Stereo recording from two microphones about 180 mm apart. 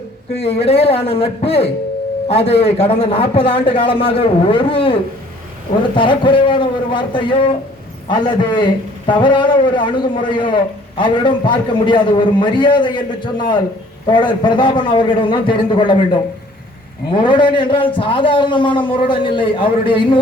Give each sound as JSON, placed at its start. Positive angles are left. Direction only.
{"t": 0.3, "sound": "a man's voice", "side_deg": 35}
{"t": 17.1, "sound": "a man's voice", "side_deg": 25}